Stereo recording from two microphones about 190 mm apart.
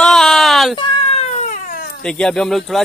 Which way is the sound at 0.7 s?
30° left (ahead or behind).